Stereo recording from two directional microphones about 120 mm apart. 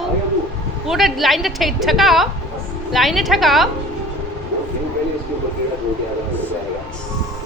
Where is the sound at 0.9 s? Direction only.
Centre (ahead or behind).